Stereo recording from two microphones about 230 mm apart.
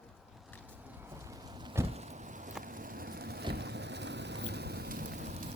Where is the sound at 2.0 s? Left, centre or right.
Right.